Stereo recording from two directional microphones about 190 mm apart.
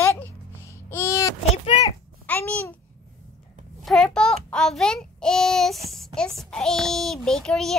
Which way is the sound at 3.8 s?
Centre (ahead or behind).